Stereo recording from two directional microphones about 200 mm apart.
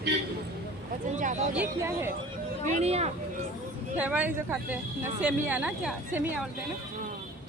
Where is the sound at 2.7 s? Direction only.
30° right (ahead or behind).